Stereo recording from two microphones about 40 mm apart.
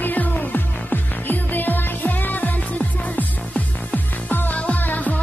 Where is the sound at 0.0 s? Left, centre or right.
Left.